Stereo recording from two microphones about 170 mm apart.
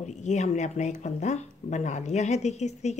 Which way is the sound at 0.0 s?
45° left (ahead or behind).